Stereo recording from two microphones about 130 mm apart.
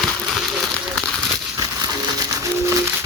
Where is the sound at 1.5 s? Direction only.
30° right (ahead or behind).